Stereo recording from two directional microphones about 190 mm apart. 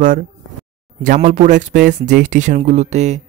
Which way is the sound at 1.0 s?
40° right (ahead or behind).